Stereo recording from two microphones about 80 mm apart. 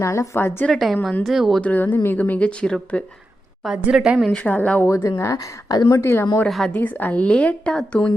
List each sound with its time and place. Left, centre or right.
0.0 s a woman's voice: left
0.7 s speech: centre
1.6 s a woman's voice: left
3.9 s a woman's voice: centre
4.3 s a woman's voice: centre
4.8 s speech: left
5.1 s speech: left
5.9 s a woman's voice: left
6.5 s speech: centre
6.7 s a woman's voice: left